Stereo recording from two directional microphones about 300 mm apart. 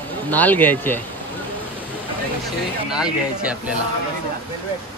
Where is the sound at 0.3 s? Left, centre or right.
Centre.